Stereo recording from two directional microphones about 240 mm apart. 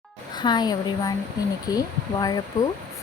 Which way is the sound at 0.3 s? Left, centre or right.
Centre.